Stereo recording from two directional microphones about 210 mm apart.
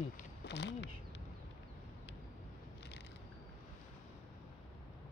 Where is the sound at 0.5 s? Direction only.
55° left (ahead or behind).